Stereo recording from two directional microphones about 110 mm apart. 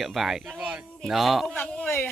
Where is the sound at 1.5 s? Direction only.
15° left (ahead or behind).